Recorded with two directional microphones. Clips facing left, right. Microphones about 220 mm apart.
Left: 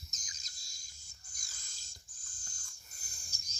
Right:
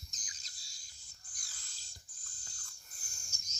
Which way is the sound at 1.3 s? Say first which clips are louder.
Even; 45° left (ahead or behind).